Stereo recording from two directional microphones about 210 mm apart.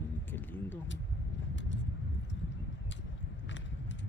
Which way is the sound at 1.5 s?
60° left (ahead or behind).